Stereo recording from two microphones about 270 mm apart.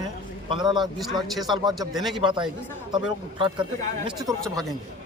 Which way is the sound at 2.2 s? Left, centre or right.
Centre.